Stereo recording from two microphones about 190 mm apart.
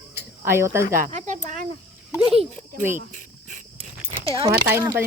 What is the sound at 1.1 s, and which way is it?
Speech, 40° right (ahead or behind).